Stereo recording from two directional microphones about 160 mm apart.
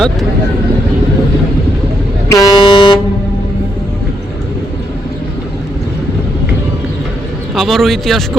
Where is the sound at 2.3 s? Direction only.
25° left (ahead or behind).